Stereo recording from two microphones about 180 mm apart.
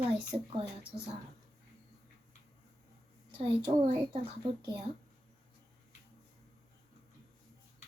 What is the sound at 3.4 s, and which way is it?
Speech, 30° right (ahead or behind).